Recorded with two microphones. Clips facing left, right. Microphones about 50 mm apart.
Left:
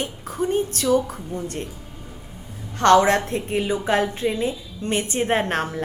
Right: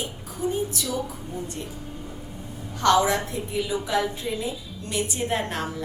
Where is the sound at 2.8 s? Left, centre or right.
Left.